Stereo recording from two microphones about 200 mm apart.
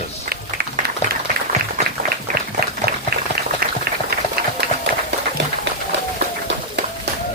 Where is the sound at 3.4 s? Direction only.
50° right (ahead or behind).